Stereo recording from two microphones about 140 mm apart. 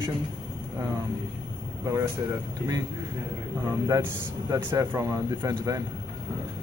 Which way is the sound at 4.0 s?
15° right (ahead or behind).